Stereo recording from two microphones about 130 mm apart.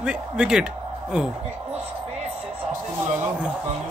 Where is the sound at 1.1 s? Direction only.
10° right (ahead or behind).